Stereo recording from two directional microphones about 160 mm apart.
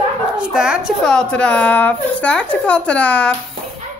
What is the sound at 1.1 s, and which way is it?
A woman's voice, 5° left (ahead or behind).